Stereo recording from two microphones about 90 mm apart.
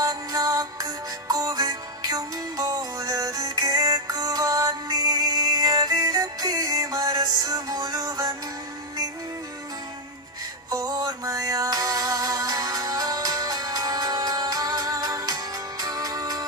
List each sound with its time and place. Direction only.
0.0 s music: 45° right (ahead or behind)
10.7 s music: 40° right (ahead or behind)